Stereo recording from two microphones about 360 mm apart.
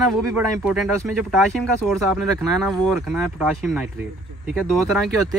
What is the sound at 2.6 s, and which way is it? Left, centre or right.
Speech, centre.